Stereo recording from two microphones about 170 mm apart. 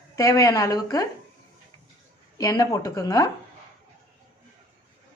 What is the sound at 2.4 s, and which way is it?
Speech, 20° left (ahead or behind).